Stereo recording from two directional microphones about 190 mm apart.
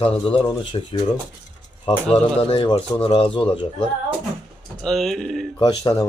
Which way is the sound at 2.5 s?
30° left (ahead or behind).